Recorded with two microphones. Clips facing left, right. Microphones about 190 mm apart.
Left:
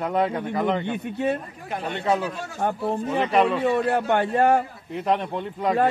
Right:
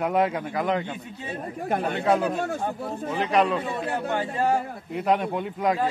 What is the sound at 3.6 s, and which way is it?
Speech, 65° left (ahead or behind).